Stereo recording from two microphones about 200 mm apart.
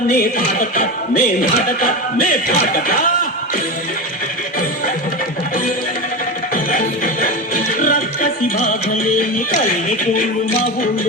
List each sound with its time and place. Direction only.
0.1 s speech: 45° left (ahead or behind)
6.5 s music: 40° left (ahead or behind)
9.5 s speech: 40° left (ahead or behind)